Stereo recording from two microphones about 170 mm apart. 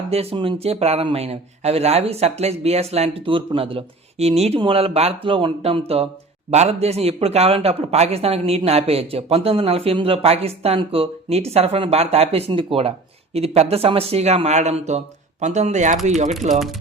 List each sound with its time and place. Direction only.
0.1 s a man's voice: 35° right (ahead or behind)